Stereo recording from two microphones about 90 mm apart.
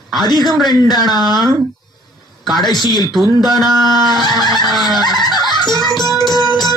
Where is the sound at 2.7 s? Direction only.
50° left (ahead or behind).